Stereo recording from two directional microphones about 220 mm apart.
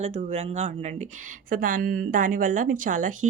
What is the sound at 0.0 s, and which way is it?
A woman's voice, 30° right (ahead or behind).